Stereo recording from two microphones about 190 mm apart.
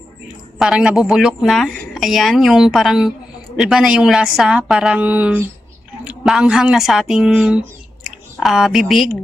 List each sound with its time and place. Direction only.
0.6 s speech: centre (ahead or behind)